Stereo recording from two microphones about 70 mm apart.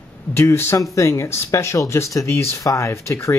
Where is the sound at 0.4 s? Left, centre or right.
Left.